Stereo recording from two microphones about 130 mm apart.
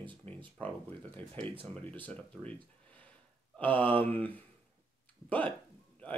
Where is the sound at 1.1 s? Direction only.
10° left (ahead or behind).